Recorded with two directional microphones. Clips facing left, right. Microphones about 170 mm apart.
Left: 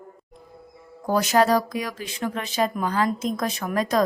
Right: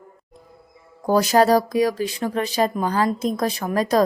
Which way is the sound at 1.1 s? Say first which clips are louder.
Right 3 dB; 35° right (ahead or behind).